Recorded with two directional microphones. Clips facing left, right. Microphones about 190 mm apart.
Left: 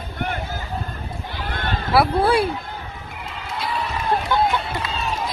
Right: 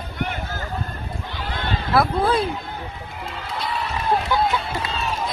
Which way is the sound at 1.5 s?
50° left (ahead or behind).